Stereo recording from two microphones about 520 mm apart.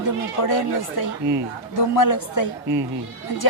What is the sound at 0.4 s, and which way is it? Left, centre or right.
Speech, left.